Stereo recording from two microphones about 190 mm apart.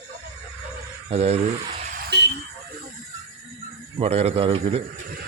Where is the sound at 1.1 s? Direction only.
35° right (ahead or behind).